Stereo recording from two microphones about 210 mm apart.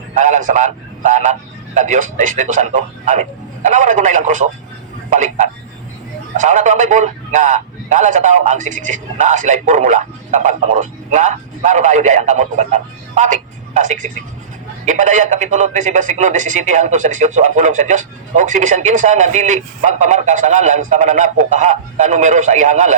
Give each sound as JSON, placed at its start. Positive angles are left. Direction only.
{"t": 0.1, "sound": "a man's voice", "side_deg": -35}